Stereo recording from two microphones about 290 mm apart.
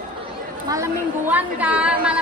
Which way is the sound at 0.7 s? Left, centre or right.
Centre.